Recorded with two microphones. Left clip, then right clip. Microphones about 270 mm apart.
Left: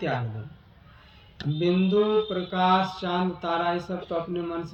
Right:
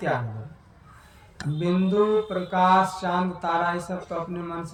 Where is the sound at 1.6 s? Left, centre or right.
Right.